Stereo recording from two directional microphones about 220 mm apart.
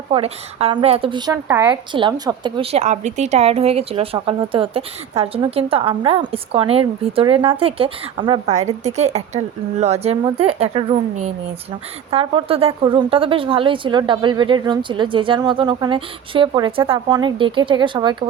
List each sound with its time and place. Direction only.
0.1 s a woman's voice: 25° right (ahead or behind)